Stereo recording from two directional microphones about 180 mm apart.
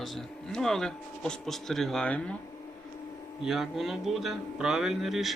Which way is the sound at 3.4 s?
Centre (ahead or behind).